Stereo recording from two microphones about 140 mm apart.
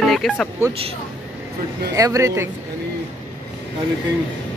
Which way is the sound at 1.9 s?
25° right (ahead or behind).